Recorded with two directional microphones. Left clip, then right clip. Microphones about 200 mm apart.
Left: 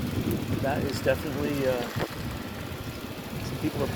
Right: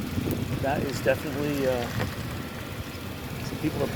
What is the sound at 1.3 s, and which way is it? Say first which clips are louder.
Speech: right 1 dB; 50° right (ahead or behind).